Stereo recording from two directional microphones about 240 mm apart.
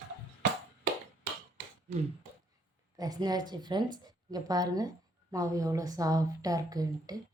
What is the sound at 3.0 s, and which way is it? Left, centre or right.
A woman's voice, centre.